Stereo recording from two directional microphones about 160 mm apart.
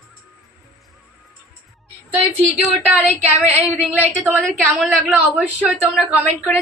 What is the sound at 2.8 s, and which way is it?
A woman's voice, 10° right (ahead or behind).